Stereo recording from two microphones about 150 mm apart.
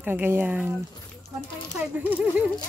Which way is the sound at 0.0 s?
10° right (ahead or behind).